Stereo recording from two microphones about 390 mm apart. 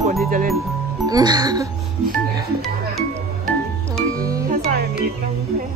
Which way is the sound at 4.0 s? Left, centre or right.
Centre.